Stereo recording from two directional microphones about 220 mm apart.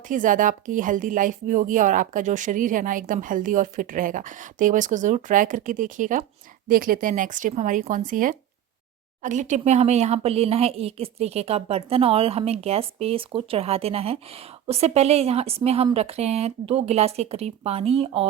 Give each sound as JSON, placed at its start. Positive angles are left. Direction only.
{"t": 0.1, "sound": "speech", "side_deg": -35}